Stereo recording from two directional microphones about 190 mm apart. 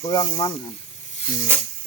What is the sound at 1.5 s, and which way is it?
Speech, 10° right (ahead or behind).